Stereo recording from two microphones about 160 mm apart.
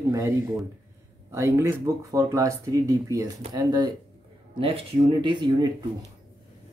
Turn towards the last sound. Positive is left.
turn(degrees=-30)  # may be behind; listen again after turning